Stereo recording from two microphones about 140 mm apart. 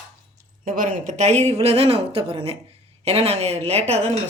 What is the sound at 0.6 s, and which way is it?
Speech, 70° right (ahead or behind).